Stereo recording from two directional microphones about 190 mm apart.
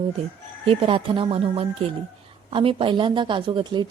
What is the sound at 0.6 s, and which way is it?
A woman's voice, 30° right (ahead or behind).